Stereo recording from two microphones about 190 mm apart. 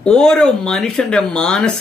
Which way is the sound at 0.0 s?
5° left (ahead or behind).